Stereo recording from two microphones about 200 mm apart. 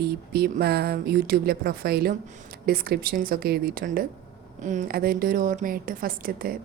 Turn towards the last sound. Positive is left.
turn(degrees=-45)  # may be behind; listen again after turning